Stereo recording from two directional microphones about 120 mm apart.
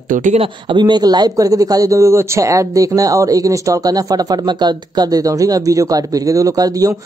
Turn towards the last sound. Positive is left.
turn(degrees=-30)  # may be behind; listen again after turning